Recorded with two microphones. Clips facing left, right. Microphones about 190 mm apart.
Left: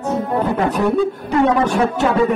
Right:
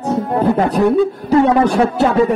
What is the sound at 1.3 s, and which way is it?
Speech, 35° right (ahead or behind).